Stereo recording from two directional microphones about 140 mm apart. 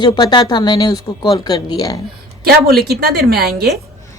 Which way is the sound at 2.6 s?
90° right.